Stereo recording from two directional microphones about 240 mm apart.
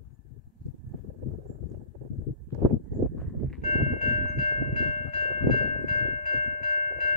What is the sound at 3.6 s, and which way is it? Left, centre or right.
Train, left.